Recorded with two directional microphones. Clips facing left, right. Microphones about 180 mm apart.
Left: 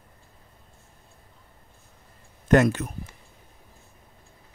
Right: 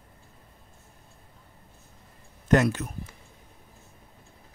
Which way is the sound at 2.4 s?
60° left (ahead or behind).